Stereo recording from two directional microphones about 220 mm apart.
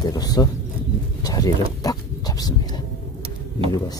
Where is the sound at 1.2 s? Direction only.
15° left (ahead or behind).